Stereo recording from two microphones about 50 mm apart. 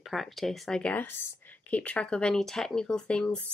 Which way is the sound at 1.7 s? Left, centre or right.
Left.